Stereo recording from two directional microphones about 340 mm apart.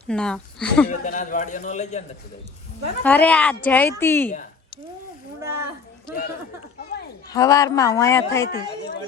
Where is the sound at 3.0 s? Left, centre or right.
Centre.